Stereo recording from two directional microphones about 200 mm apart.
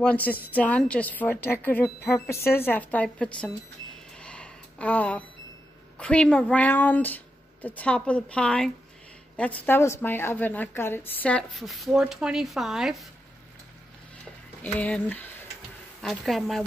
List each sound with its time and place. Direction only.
0.0 s speech: 10° left (ahead or behind)
4.2 s a sound: 5° left (ahead or behind)
5.9 s a woman's voice: 5° left (ahead or behind)
14.6 s a woman's voice: 5° left (ahead or behind)